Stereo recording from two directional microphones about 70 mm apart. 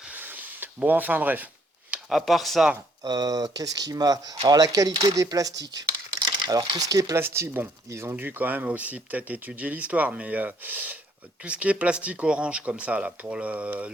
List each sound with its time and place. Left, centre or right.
0.1 s a sound: right
2.0 s speech: centre
3.0 s speech: right
6.1 s speech: right
7.2 s speech: right
8.1 s speech: right